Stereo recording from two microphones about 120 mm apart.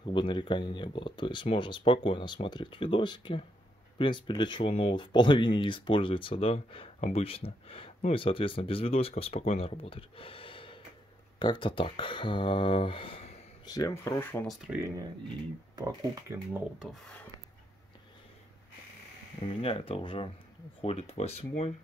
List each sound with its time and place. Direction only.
0.0 s speech: 45° left (ahead or behind)
13.7 s speech: 30° left (ahead or behind)
14.5 s speech: 5° right (ahead or behind)
15.7 s speech: 30° right (ahead or behind)
16.8 s speech: 5° left (ahead or behind)
19.4 s speech: 50° left (ahead or behind)
20.8 s speech: 60° left (ahead or behind)